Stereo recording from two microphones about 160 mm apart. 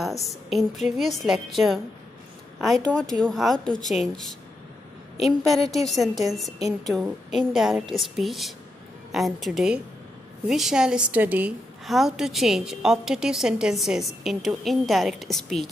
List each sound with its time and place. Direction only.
0.0 s a woman's voice: centre (ahead or behind)
5.6 s a woman's voice: 20° right (ahead or behind)
5.9 s a woman's voice: centre (ahead or behind)